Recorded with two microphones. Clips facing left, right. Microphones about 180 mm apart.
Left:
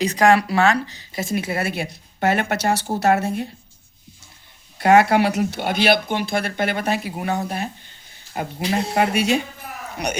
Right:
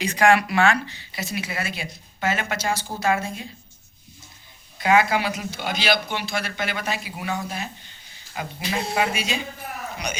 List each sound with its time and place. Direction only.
0.0 s speech: 35° left (ahead or behind); by 3.5 s 65° left (ahead or behind)
4.8 s speech: 65° left (ahead or behind)
8.3 s speech: 45° left (ahead or behind)
9.1 s speech: 65° left (ahead or behind)